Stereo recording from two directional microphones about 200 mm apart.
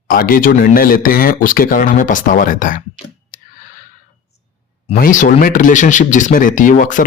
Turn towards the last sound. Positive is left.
turn(degrees=40)  # may be behind; listen again after turning